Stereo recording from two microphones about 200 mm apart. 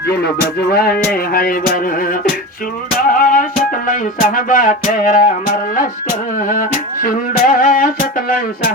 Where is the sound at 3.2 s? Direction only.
45° left (ahead or behind).